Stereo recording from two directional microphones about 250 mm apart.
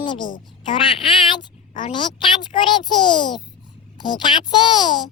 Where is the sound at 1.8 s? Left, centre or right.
Centre.